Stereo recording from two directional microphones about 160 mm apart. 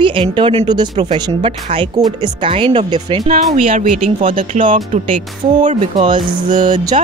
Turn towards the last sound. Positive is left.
turn(degrees=-45)  # may be behind; listen again after turning